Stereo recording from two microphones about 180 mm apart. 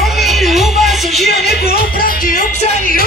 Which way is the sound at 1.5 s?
60° left (ahead or behind).